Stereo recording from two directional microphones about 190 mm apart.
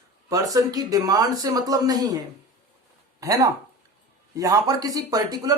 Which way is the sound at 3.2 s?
20° right (ahead or behind).